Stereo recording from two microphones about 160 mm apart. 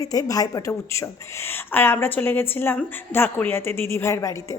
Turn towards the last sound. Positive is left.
turn(degrees=20)  # may be behind; listen again after turning